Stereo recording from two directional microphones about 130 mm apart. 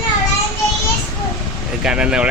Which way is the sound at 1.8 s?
5° right (ahead or behind).